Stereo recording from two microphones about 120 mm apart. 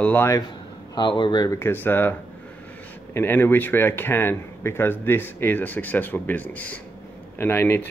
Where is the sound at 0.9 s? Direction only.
40° left (ahead or behind).